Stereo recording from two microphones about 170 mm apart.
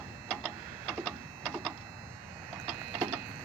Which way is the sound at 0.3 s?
5° left (ahead or behind).